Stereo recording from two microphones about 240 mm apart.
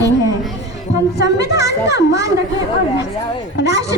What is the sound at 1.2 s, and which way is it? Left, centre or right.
A woman's voice, left.